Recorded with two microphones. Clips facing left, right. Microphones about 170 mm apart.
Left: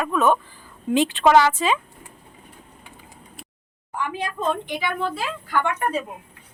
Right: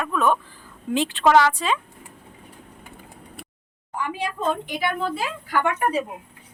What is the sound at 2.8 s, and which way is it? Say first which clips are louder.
Vehicle: right 3 dB; 60° right (ahead or behind).